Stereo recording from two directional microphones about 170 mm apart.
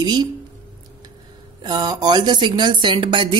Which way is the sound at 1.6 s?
25° right (ahead or behind).